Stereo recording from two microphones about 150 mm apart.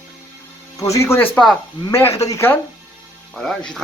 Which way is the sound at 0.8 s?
20° left (ahead or behind).